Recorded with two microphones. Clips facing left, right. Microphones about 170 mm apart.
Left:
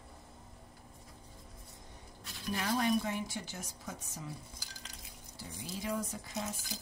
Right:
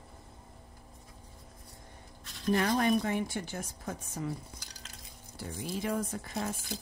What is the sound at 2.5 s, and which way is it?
Speech, 55° right (ahead or behind).